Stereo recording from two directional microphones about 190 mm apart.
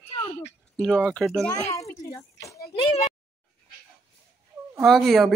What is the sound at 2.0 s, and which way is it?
Speech, 15° left (ahead or behind).